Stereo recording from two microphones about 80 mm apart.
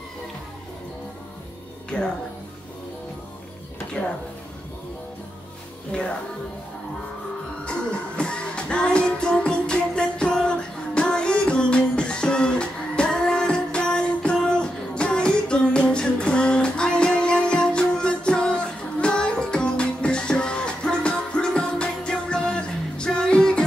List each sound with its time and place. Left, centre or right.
1.9 s speech: centre
5.9 s music: centre
8.2 s music: centre